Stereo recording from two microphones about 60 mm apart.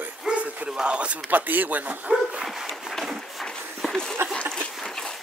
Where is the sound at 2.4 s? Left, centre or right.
Centre.